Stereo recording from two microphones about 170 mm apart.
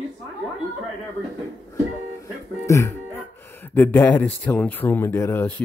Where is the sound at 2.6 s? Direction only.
15° left (ahead or behind).